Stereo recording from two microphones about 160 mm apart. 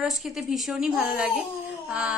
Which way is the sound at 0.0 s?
Centre (ahead or behind).